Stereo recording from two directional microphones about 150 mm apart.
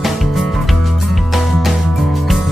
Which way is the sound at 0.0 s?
Centre (ahead or behind).